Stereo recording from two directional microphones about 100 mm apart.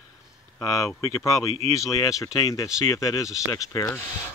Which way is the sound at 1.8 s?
35° left (ahead or behind).